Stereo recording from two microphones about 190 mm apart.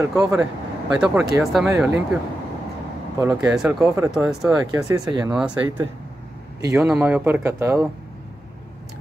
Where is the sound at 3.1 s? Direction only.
15° right (ahead or behind).